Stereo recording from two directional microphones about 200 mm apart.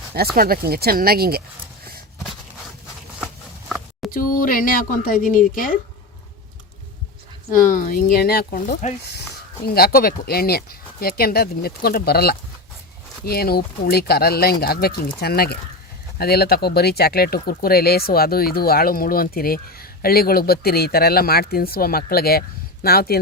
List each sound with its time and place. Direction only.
0.3 s speech: 45° right (ahead or behind)
4.1 s speech: 45° left (ahead or behind)
7.5 s speech: 40° left (ahead or behind)
9.0 s speech: 55° left (ahead or behind)